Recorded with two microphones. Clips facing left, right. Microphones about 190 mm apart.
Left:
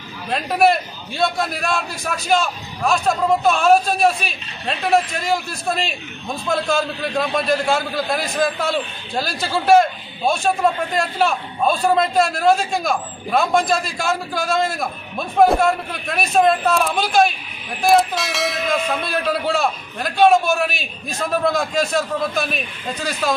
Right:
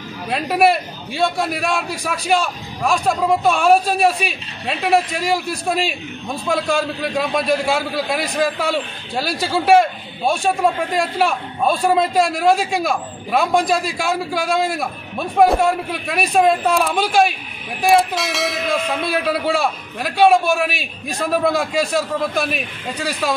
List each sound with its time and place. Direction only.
0.3 s a man's voice: 10° right (ahead or behind)
18.1 s a man's voice: centre (ahead or behind)